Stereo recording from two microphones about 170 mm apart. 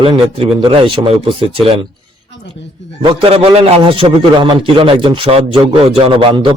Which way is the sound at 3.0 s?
30° right (ahead or behind).